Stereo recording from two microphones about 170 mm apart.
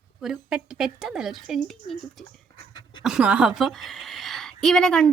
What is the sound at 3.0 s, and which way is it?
A woman's voice, 5° right (ahead or behind).